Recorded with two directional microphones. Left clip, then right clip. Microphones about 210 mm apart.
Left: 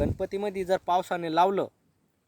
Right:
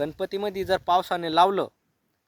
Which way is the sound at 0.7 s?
Centre (ahead or behind).